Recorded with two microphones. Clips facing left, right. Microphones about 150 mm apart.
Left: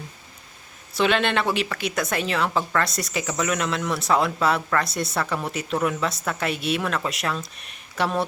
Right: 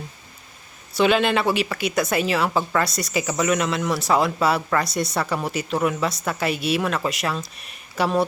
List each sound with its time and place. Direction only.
0.9 s speech: centre (ahead or behind)